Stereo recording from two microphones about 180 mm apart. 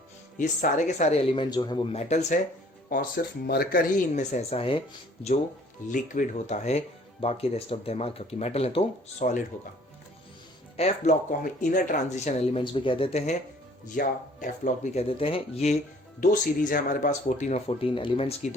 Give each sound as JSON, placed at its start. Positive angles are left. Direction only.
{"t": 0.3, "sound": "speech", "side_deg": 45}
{"t": 2.9, "sound": "speech", "side_deg": 55}
{"t": 5.9, "sound": "speech", "side_deg": 45}
{"t": 10.8, "sound": "speech", "side_deg": 40}
{"t": 13.8, "sound": "speech", "side_deg": 50}
{"t": 15.0, "sound": "speech", "side_deg": 30}
{"t": 16.2, "sound": "speech", "side_deg": 50}